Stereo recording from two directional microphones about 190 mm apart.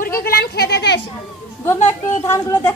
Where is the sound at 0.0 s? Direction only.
50° left (ahead or behind).